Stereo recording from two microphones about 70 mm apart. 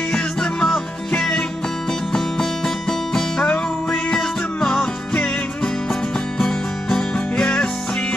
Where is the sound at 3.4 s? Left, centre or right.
Centre.